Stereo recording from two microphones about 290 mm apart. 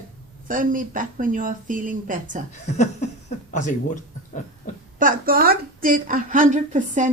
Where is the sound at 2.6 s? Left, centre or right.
Left.